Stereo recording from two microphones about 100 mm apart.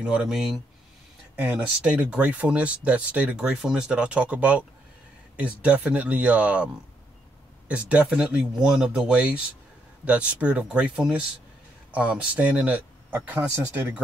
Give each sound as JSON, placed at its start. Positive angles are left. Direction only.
{"t": 0.0, "sound": "speech", "side_deg": -10}
{"t": 1.9, "sound": "speech", "side_deg": -10}